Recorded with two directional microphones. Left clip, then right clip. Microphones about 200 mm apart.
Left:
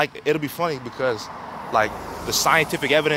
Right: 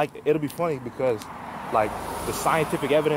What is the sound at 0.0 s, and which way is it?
Speech, 10° left (ahead or behind).